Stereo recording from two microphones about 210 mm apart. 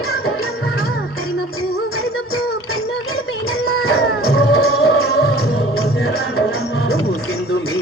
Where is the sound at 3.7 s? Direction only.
50° left (ahead or behind).